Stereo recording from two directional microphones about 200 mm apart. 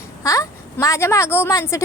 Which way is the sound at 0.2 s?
15° left (ahead or behind).